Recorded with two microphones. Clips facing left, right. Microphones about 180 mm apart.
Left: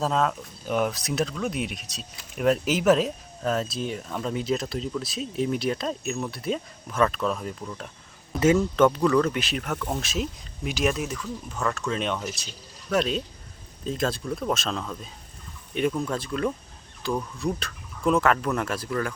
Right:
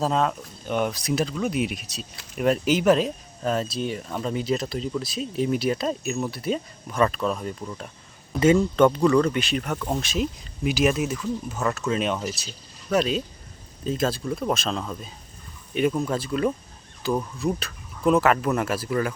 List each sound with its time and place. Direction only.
0.0 s speech: centre (ahead or behind)
15.9 s speech: 15° right (ahead or behind)
16.1 s speech: 5° right (ahead or behind)